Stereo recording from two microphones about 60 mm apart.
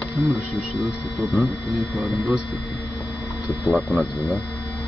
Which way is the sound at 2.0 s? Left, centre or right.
Centre.